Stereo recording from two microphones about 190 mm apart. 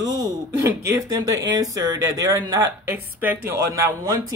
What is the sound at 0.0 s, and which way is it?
Speech, 20° right (ahead or behind).